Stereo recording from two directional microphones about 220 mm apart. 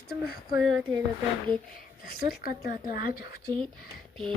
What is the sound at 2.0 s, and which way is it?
Speech, 40° left (ahead or behind).